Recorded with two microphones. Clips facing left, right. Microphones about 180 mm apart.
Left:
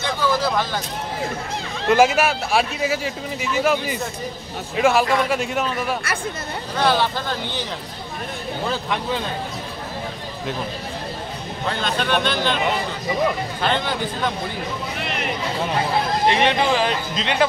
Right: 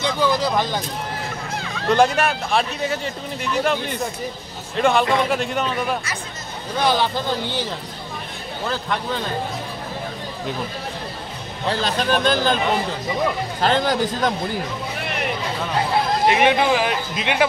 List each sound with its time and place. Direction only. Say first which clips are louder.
0.2 s a sound: right 1 dB; 15° right (ahead or behind)
1.9 s speech: left 1 dB; 5° left (ahead or behind)
6.8 s speech: even; 15° right (ahead or behind)
11.6 s a man's voice: right 2 dB; 30° right (ahead or behind)
13.6 s a man's voice: right 7 dB; 40° right (ahead or behind)
16.3 s speech: right 2 dB; 10° right (ahead or behind)